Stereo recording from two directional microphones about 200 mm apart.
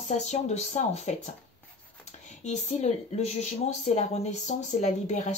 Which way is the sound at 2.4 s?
35° left (ahead or behind).